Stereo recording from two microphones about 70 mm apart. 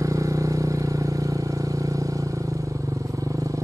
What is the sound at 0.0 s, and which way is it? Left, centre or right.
Vehicle, right.